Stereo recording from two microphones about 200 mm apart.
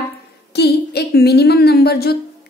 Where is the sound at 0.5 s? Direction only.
55° left (ahead or behind).